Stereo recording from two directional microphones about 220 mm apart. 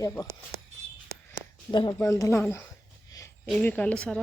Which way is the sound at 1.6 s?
20° left (ahead or behind).